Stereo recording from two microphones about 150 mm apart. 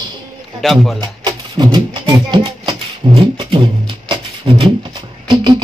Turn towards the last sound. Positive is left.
turn(degrees=-30)  # may be behind; listen again after turning